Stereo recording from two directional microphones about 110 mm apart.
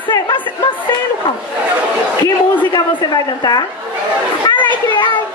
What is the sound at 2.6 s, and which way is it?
A man's voice, 45° left (ahead or behind).